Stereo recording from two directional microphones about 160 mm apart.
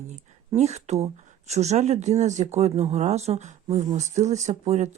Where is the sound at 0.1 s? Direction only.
45° right (ahead or behind).